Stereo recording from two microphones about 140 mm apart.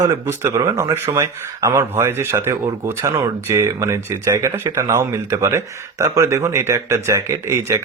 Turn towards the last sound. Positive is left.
turn(degrees=-20)  # may be behind; listen again after turning